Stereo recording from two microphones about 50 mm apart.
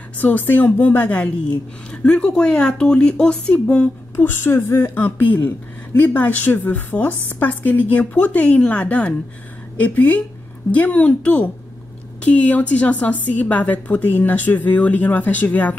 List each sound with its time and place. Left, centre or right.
0.2 s a woman's voice: left
1.9 s speech: centre
4.2 s speech: left
4.9 s a woman's voice: left